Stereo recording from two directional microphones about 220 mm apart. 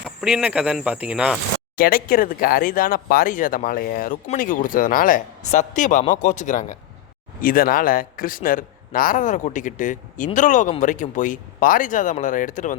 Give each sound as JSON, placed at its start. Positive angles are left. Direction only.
{"t": 0.0, "sound": "speech", "side_deg": -5}
{"t": 1.7, "sound": "speech", "side_deg": 40}